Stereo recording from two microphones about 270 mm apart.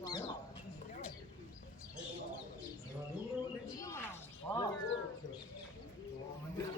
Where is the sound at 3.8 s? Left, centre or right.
Centre.